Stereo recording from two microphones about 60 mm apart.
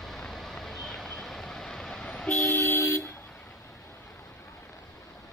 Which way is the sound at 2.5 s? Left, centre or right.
Left.